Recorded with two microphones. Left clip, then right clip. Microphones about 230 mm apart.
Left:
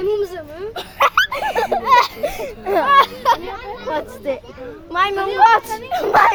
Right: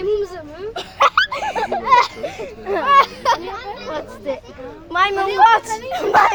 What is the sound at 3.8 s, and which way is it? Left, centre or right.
Children playing, left.